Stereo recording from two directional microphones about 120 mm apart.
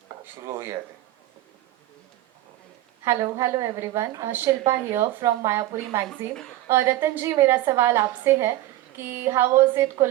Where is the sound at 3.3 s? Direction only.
25° right (ahead or behind).